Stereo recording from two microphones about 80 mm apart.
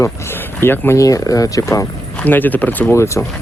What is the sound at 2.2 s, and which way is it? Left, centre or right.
Speech, left.